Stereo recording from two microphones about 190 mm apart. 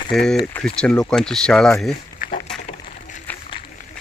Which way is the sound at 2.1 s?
45° left (ahead or behind).